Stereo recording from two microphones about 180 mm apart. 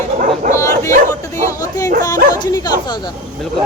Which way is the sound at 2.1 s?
20° left (ahead or behind).